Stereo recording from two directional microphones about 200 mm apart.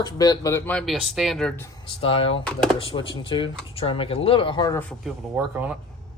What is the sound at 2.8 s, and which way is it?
Speech, 25° left (ahead or behind).